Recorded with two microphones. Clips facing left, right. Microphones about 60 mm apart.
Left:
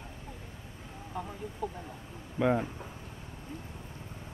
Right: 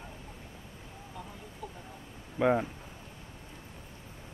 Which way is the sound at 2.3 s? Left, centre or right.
Centre.